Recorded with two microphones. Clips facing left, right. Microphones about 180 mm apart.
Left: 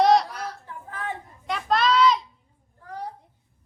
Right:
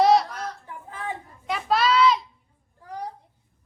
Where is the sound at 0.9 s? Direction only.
15° right (ahead or behind).